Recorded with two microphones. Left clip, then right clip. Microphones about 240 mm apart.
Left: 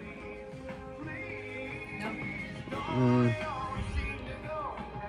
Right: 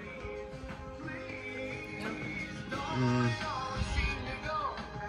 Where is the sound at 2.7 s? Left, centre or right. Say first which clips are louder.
Left 4 dB; centre.